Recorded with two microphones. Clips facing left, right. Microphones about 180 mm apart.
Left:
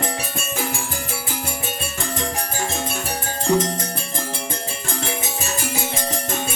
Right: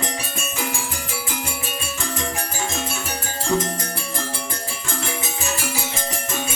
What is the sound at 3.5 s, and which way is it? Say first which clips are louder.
Music: left 3 dB; 35° left (ahead or behind).